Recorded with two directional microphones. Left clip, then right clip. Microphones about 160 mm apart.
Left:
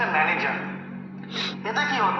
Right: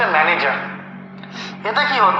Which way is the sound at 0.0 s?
35° right (ahead or behind).